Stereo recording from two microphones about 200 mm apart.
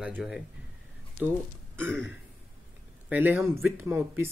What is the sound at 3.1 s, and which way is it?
Speech, 10° right (ahead or behind).